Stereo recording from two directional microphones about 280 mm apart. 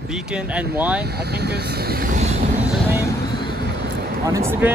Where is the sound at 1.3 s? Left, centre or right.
Right.